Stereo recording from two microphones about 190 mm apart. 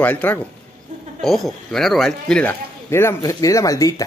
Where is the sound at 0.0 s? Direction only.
10° left (ahead or behind).